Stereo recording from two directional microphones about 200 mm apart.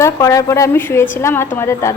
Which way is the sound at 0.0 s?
15° left (ahead or behind).